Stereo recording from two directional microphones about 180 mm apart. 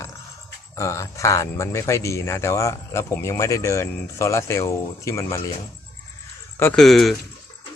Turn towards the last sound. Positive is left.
turn(degrees=0)  # may be behind; listen again after turning